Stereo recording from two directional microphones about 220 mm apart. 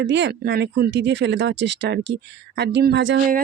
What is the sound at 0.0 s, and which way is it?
Speech, 50° right (ahead or behind).